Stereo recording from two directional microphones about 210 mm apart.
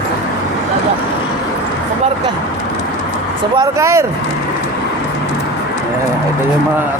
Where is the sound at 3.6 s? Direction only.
15° right (ahead or behind).